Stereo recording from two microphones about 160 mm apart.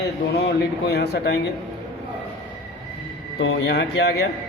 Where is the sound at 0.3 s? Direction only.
90° left.